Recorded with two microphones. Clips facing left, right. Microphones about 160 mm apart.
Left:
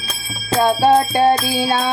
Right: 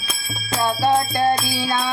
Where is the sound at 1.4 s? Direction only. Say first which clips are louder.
Left 5 dB; 15° left (ahead or behind).